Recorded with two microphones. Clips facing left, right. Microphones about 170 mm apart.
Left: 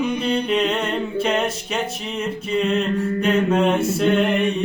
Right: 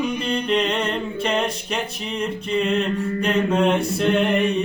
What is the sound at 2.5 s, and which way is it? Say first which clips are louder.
Mantra: left 1 dB; centre (ahead or behind).